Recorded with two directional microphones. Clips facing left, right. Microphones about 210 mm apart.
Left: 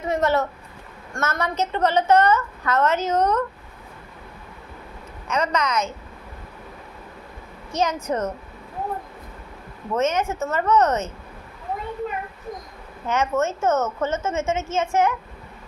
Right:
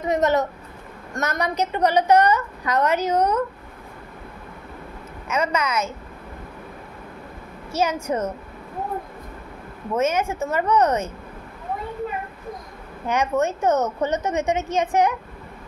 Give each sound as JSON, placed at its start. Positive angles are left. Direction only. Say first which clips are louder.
{"t": 0.0, "sound": "a child's voice", "louder": "right 1 dB", "side_deg": -20}
{"t": 5.3, "sound": "a woman's voice", "louder": "even", "side_deg": -10}
{"t": 7.7, "sound": "a woman's voice", "louder": "right 1 dB", "side_deg": -10}
{"t": 9.9, "sound": "a woman's voice", "louder": "even", "side_deg": -10}
{"t": 13.0, "sound": "a woman's voice", "louder": "right 1 dB", "side_deg": -15}